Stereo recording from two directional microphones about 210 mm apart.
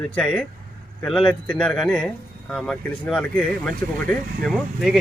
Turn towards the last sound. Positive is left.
turn(degrees=0)  # may be behind; listen again after turning